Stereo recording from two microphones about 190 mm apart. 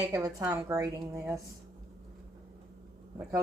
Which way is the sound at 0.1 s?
20° right (ahead or behind).